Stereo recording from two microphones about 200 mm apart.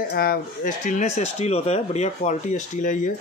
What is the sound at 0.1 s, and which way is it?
Speech, 45° left (ahead or behind).